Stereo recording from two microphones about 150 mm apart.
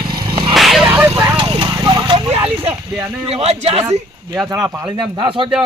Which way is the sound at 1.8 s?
30° right (ahead or behind).